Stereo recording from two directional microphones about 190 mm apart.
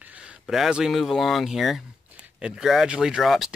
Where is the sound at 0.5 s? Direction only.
5° right (ahead or behind).